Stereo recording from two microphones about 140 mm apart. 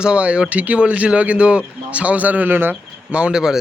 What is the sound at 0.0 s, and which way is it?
Speech, 10° right (ahead or behind).